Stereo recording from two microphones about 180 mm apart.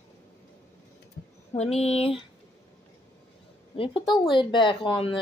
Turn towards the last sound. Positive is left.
turn(degrees=30)  # may be behind; listen again after turning